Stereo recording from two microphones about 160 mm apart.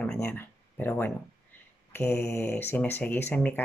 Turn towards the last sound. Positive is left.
turn(degrees=10)  # may be behind; listen again after turning